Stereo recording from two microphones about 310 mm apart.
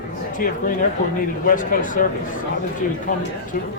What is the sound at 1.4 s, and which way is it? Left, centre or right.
Speech, left.